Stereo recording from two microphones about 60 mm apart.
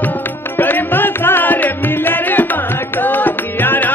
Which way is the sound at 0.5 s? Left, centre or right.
Left.